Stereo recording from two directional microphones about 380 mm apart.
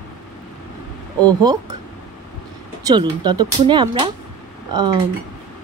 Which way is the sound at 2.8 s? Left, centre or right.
Centre.